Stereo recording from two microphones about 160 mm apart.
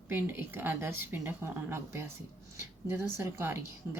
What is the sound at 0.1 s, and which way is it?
A woman's voice, 15° right (ahead or behind).